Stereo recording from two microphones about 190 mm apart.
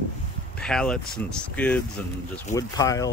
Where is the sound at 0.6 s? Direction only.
5° left (ahead or behind).